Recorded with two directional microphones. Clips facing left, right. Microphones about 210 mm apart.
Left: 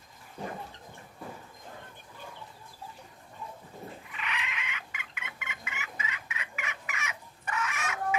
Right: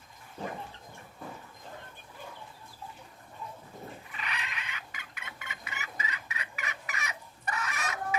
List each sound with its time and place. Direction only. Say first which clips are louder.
4.1 s chicken: left 3 dB; 40° right (ahead or behind)